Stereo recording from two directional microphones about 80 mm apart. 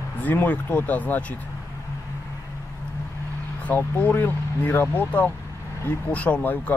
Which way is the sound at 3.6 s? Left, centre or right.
Left.